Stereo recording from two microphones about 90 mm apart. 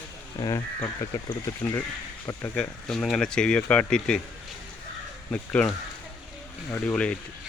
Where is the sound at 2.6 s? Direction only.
5° left (ahead or behind).